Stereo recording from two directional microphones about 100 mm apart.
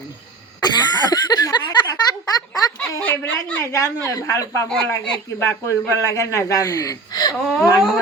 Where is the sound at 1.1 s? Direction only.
45° left (ahead or behind).